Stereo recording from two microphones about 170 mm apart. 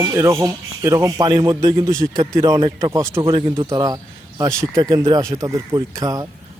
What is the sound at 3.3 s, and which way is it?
Speech, 30° right (ahead or behind).